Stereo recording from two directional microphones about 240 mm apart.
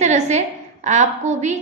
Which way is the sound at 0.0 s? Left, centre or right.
Right.